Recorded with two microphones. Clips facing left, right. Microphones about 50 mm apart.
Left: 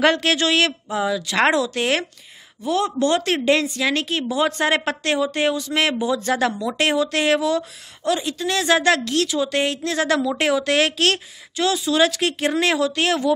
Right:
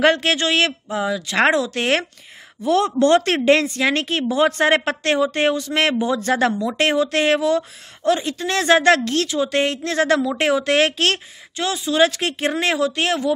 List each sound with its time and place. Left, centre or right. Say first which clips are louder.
0.0 s speech: right 1 dB; right
0.8 s speech: even; centre
1.1 s speech: right 2 dB; right
1.7 s a woman's voice: right 1 dB; right
2.6 s speech: right 4 dB; right
3.2 s a woman's voice: right 3 dB; right